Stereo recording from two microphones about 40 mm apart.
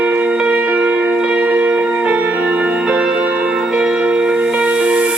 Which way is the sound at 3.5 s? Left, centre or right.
Right.